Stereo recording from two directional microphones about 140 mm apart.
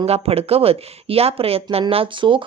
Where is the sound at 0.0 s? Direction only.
45° right (ahead or behind).